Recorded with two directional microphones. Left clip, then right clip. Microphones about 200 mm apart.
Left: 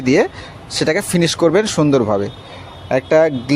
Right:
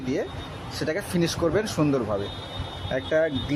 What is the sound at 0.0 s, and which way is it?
Speech, 40° left (ahead or behind).